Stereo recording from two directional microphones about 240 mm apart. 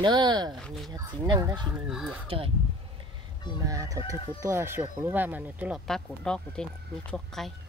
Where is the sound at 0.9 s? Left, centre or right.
Centre.